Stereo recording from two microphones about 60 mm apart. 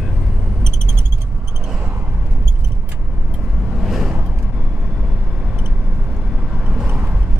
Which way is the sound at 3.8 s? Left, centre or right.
Centre.